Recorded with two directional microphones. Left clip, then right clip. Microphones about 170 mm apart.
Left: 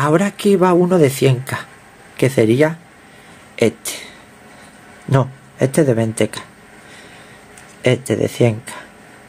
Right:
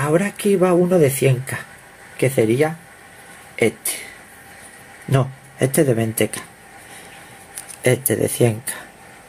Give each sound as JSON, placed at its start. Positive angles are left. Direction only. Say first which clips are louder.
{"t": 0.0, "sound": "speech", "louder": "left 3 dB", "side_deg": 10}
{"t": 5.1, "sound": "speech", "louder": "left 3 dB", "side_deg": 10}
{"t": 7.8, "sound": "speech", "louder": "left 2 dB", "side_deg": 10}